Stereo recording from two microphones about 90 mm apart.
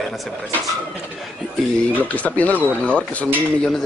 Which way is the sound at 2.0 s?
15° left (ahead or behind).